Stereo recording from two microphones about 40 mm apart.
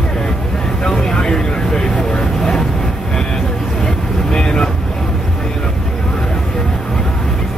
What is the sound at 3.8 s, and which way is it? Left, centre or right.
Vehicle, centre.